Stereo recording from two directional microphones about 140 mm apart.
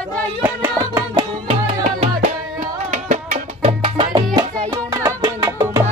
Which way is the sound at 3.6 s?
40° right (ahead or behind).